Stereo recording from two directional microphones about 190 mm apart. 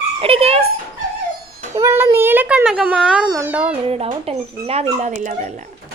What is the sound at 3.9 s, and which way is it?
Speech, 30° right (ahead or behind).